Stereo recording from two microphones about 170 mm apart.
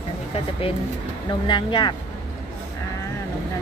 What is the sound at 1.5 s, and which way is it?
Speech, 25° left (ahead or behind).